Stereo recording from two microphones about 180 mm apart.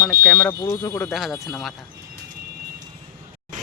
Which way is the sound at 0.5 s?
20° left (ahead or behind).